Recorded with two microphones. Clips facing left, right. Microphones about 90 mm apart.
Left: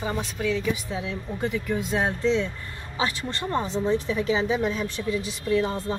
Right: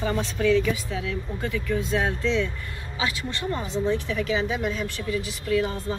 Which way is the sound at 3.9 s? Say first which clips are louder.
Left 2 dB; 25° left (ahead or behind).